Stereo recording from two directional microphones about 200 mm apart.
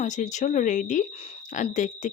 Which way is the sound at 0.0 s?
35° left (ahead or behind).